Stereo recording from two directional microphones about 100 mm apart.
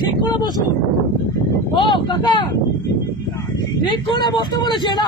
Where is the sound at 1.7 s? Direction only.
55° left (ahead or behind).